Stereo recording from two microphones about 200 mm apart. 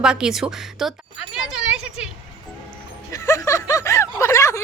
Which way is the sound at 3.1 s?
15° left (ahead or behind).